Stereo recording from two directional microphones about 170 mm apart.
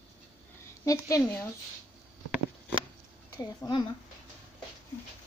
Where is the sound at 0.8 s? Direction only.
20° left (ahead or behind).